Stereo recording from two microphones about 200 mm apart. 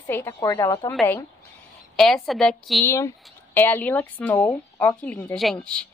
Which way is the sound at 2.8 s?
15° left (ahead or behind).